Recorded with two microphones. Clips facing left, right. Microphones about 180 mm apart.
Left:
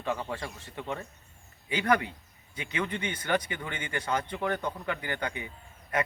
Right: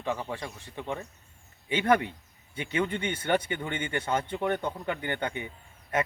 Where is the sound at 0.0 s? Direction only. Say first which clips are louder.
Even; 15° right (ahead or behind).